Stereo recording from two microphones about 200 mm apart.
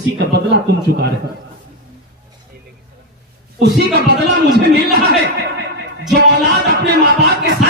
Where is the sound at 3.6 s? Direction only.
60° right (ahead or behind).